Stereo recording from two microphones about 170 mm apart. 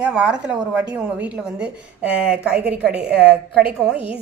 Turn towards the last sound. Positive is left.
turn(degrees=-5)  # may be behind; listen again after turning